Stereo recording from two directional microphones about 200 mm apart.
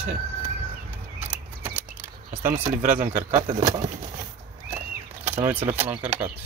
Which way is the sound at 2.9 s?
10° right (ahead or behind).